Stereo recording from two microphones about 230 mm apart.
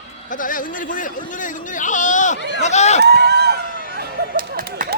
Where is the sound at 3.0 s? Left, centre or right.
Right.